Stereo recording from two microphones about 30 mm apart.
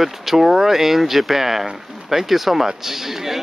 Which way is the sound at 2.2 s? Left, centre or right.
Centre.